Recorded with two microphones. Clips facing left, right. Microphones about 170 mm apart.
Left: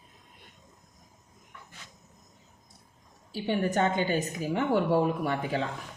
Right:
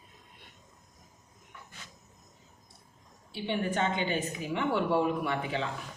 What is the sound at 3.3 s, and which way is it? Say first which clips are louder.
A woman's voice: left 4 dB; 40° left (ahead or behind).